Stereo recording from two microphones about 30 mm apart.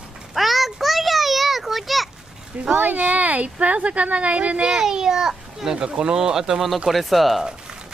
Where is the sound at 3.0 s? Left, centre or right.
Right.